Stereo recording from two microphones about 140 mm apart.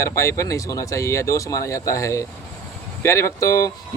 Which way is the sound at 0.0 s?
20° left (ahead or behind).